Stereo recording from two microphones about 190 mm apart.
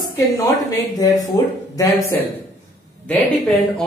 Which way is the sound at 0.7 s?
20° left (ahead or behind).